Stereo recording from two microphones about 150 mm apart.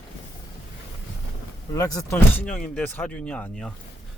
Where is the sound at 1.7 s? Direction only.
25° left (ahead or behind).